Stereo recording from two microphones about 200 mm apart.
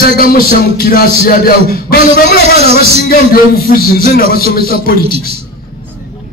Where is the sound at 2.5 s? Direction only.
30° right (ahead or behind).